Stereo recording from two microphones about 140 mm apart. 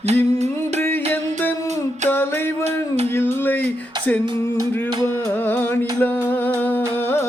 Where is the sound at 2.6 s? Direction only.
50° right (ahead or behind).